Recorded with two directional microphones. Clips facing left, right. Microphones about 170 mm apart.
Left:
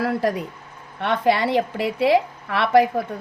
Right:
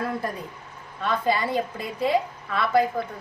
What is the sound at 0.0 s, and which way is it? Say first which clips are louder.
Speech: left 7 dB; 85° left.